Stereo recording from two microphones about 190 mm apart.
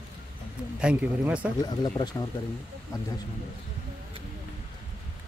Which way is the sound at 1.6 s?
20° left (ahead or behind).